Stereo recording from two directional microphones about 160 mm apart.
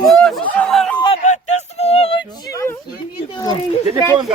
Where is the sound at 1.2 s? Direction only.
45° left (ahead or behind).